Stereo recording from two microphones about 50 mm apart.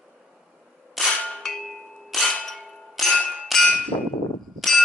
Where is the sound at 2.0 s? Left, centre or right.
Centre.